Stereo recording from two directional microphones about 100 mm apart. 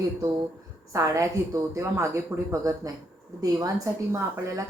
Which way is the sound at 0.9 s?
30° right (ahead or behind).